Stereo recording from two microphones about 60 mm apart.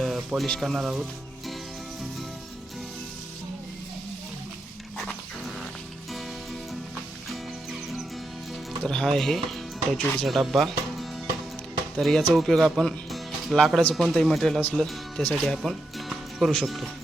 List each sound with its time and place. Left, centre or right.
0.0 s music: centre
0.6 s a man's voice: centre
7.3 s music: centre
8.8 s a man's voice: centre